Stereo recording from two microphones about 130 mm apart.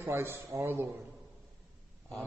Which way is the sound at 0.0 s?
20° right (ahead or behind).